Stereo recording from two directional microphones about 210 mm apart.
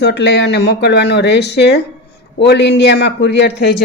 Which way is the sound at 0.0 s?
55° left (ahead or behind).